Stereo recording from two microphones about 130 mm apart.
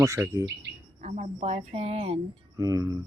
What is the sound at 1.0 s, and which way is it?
Speech, 65° right (ahead or behind).